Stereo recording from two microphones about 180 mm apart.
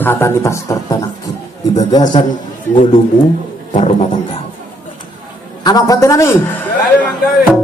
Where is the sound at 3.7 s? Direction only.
45° left (ahead or behind).